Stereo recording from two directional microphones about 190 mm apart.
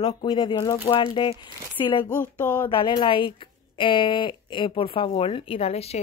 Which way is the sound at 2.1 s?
10° left (ahead or behind).